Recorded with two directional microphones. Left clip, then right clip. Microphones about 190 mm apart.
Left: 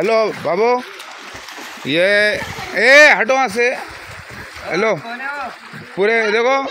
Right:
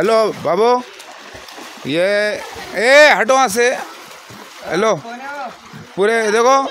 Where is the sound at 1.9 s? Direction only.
Centre (ahead or behind).